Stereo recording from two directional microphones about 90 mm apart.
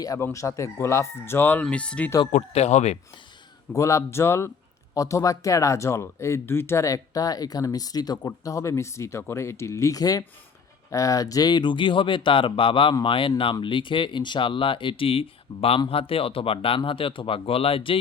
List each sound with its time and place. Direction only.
0.0 s speech: 40° left (ahead or behind); by 1.6 s 25° left (ahead or behind)
1.7 s speech: 15° left (ahead or behind)
3.7 s speech: 35° left (ahead or behind); by 18.0 s 85° left